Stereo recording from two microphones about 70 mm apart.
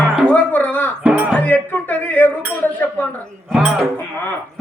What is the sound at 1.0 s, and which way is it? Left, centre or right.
Music, right.